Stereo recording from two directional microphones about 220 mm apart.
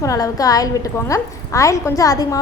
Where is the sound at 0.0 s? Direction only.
15° left (ahead or behind).